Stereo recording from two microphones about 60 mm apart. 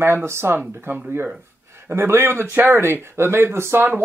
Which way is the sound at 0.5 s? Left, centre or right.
Right.